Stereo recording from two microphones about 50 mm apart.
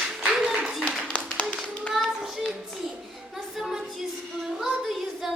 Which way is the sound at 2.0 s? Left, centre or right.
Centre.